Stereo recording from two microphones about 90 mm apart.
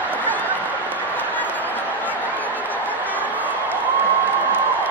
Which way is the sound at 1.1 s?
20° left (ahead or behind).